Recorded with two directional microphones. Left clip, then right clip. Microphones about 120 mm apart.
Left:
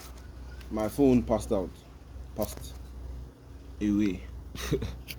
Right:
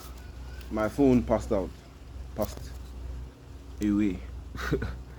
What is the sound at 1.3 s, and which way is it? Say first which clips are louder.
Speech: right 1 dB; 50° left (ahead or behind).